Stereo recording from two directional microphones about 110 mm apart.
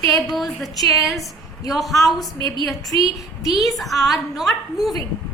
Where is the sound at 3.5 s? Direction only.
Centre (ahead or behind).